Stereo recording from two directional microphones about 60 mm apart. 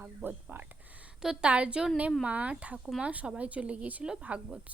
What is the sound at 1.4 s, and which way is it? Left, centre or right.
Speech, right.